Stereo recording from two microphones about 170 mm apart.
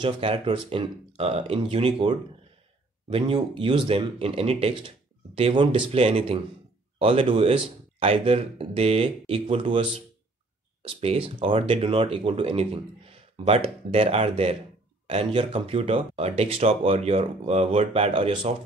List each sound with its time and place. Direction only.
0.0 s speech: 30° right (ahead or behind)